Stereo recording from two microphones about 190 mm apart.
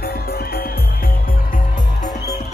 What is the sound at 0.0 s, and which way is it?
Music, 55° left (ahead or behind).